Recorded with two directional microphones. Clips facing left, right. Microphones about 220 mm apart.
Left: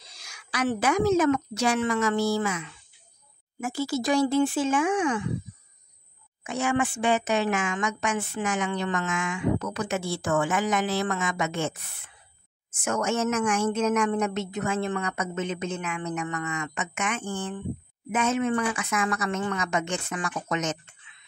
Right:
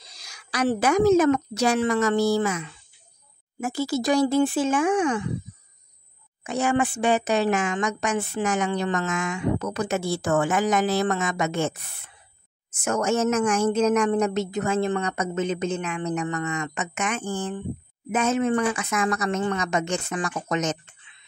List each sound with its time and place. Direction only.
0.1 s speech: 35° right (ahead or behind)
6.4 s speech: 35° right (ahead or behind)
12.8 s speech: 40° right (ahead or behind)